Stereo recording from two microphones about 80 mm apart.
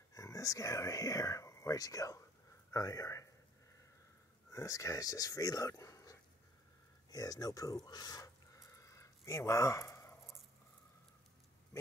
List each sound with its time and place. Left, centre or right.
0.1 s speech: left
4.5 s speech: left
7.1 s speech: left
8.5 s a sound: left